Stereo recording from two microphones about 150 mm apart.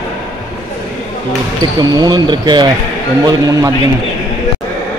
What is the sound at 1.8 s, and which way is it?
Speech, 25° right (ahead or behind).